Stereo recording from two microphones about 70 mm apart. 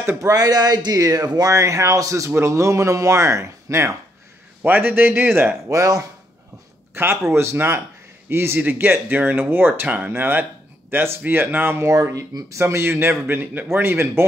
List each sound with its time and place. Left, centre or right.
0.2 s speech: right
4.6 s a man's voice: right
5.7 s speech: right
6.9 s a man's voice: right
11.9 s speech: right
12.5 s a man's voice: right